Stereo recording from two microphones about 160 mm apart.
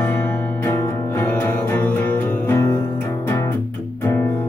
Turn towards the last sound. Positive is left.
turn(degrees=15)  # may be behind; listen again after turning